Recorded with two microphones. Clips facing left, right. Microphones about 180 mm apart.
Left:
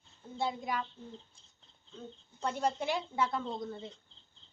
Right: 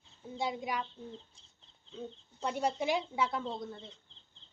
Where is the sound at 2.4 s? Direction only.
10° right (ahead or behind).